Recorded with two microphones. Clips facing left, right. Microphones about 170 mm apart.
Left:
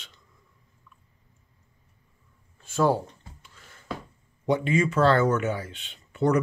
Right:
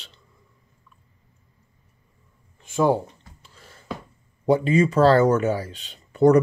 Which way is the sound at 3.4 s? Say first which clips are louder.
Right 4 dB; 35° right (ahead or behind).